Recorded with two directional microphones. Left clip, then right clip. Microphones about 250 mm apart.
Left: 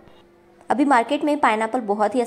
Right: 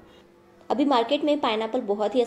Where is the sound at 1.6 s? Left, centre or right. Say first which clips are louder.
Left 4 dB; left.